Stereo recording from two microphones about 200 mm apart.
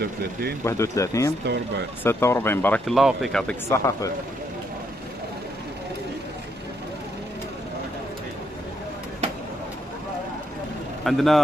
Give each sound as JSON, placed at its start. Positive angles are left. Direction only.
{"t": 0.0, "sound": "speech", "side_deg": -55}
{"t": 0.7, "sound": "speech", "side_deg": 15}
{"t": 1.4, "sound": "speech", "side_deg": -55}
{"t": 2.0, "sound": "speech", "side_deg": 10}
{"t": 11.1, "sound": "a man's voice", "side_deg": 0}